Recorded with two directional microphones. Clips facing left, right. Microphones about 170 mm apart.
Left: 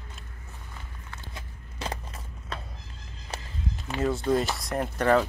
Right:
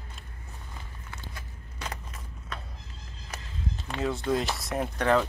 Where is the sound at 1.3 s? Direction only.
30° left (ahead or behind).